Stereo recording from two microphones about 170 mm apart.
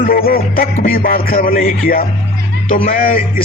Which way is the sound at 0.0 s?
60° left (ahead or behind).